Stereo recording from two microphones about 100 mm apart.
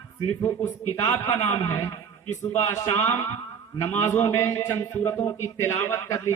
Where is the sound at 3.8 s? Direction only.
25° left (ahead or behind).